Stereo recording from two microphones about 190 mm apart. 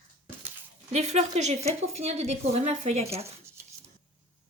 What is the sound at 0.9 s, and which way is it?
A woman's voice, 35° right (ahead or behind).